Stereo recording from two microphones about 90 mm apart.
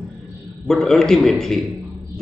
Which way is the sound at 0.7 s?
5° left (ahead or behind).